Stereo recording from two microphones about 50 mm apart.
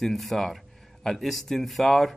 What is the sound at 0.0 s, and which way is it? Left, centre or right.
Speech, centre.